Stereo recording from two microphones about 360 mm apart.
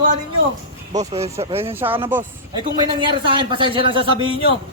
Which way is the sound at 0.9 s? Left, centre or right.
Centre.